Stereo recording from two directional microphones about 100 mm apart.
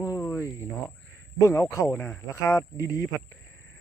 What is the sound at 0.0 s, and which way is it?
Cricket, 35° left (ahead or behind).